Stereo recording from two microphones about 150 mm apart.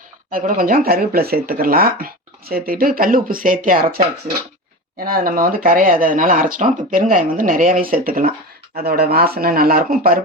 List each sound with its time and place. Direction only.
0.3 s speech: 65° right (ahead or behind)
5.0 s speech: 70° right (ahead or behind)
8.7 s speech: 90° right